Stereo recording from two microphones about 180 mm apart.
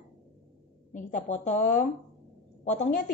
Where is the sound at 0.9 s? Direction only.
45° left (ahead or behind).